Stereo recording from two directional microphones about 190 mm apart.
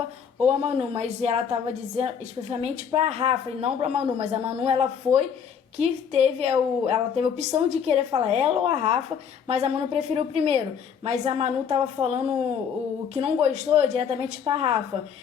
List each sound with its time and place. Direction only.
0.4 s a woman's voice: 30° right (ahead or behind)